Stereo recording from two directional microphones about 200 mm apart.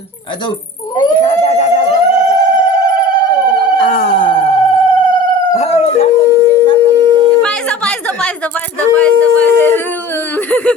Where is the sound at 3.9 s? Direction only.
45° left (ahead or behind).